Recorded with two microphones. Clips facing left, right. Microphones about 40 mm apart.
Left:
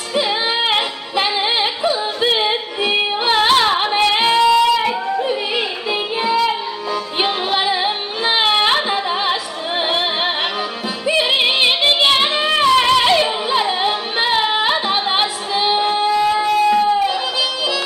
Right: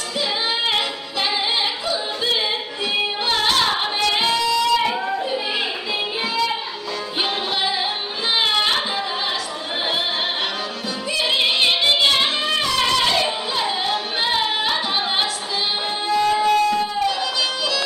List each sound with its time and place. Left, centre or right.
0.1 s music: left
4.7 s a sound: centre
5.9 s music: centre